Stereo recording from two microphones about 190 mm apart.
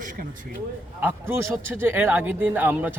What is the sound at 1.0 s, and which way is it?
A man's voice, 10° right (ahead or behind).